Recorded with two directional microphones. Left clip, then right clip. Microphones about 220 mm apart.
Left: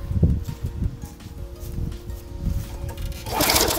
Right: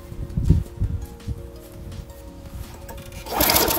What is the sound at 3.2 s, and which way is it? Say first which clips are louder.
Sewing machine: even; 15° right (ahead or behind).